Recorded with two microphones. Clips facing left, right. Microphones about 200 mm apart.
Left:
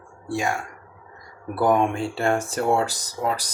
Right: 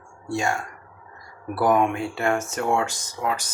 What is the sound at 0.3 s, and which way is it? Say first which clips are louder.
Speech: even; 15° left (ahead or behind).